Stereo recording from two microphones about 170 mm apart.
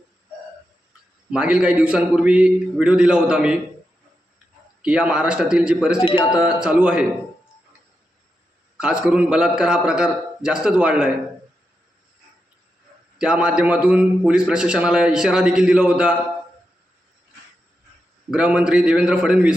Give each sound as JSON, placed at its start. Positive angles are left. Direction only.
{"t": 1.3, "sound": "a man's voice", "side_deg": -5}
{"t": 4.8, "sound": "a man's voice", "side_deg": -5}
{"t": 6.1, "sound": "a man's voice", "side_deg": 30}
{"t": 6.4, "sound": "a man's voice", "side_deg": -5}
{"t": 8.8, "sound": "a man's voice", "side_deg": -5}
{"t": 13.1, "sound": "a man's voice", "side_deg": -5}
{"t": 18.3, "sound": "a man's voice", "side_deg": -5}